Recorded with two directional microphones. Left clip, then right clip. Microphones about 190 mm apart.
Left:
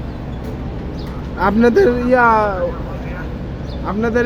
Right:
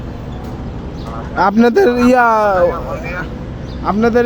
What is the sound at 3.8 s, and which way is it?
Speech, 50° right (ahead or behind).